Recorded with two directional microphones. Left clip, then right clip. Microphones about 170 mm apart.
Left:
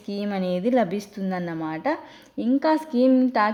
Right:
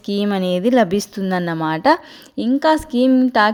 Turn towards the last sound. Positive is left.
turn(degrees=-20)  # may be behind; listen again after turning